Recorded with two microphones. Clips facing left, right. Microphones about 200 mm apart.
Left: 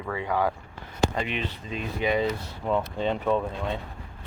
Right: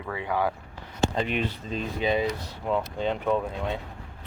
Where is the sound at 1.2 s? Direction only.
40° right (ahead or behind).